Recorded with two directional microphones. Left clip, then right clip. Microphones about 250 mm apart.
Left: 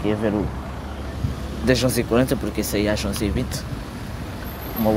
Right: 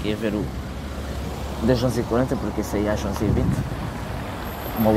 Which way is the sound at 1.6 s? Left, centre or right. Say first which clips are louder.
Left 2 dB; centre.